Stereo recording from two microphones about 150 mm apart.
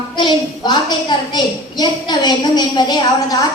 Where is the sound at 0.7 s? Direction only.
30° left (ahead or behind).